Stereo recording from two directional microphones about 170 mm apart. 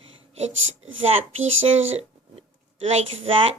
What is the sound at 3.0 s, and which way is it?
Speech, 30° right (ahead or behind).